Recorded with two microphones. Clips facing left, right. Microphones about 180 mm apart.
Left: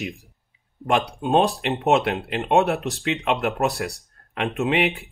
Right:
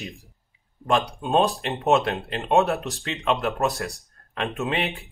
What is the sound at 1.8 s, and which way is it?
Speech, 10° left (ahead or behind).